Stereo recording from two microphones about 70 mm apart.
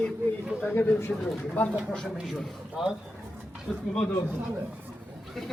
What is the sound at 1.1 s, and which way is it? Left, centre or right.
Speech, centre.